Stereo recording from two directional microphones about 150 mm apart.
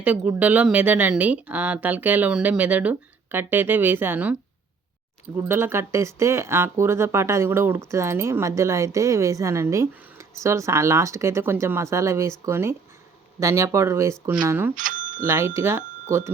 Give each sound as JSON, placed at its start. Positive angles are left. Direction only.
{"t": 0.0, "sound": "speech", "side_deg": -10}
{"t": 5.4, "sound": "speech", "side_deg": -15}
{"t": 14.8, "sound": "a sound", "side_deg": -65}
{"t": 15.3, "sound": "speech", "side_deg": -20}